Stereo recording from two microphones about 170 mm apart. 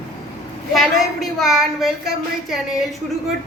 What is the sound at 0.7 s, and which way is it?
A woman's voice, centre (ahead or behind).